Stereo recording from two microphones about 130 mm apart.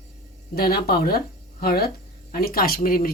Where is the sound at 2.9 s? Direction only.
90° left.